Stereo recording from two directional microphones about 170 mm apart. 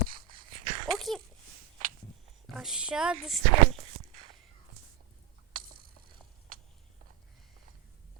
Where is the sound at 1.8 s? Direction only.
55° right (ahead or behind).